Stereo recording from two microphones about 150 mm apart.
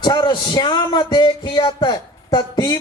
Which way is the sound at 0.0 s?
30° left (ahead or behind).